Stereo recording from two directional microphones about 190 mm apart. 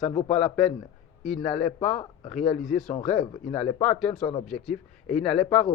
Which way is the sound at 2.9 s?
35° left (ahead or behind).